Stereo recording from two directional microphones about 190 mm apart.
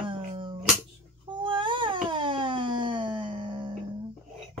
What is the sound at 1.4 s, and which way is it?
Cat, 25° right (ahead or behind).